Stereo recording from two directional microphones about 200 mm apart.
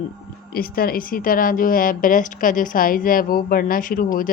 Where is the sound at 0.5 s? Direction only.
45° left (ahead or behind).